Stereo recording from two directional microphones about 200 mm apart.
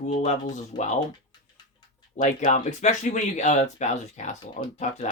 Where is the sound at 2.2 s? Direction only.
40° left (ahead or behind).